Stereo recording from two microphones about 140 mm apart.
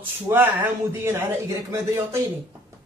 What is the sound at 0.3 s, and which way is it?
A man's voice, 15° right (ahead or behind).